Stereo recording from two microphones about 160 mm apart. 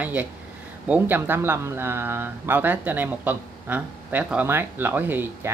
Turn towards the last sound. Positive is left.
turn(degrees=-15)  # may be behind; listen again after turning